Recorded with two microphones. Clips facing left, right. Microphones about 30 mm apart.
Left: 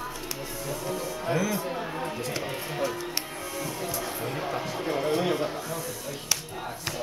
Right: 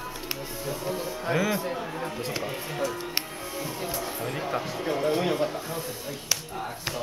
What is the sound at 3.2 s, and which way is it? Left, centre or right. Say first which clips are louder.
Music: right 1 dB; right.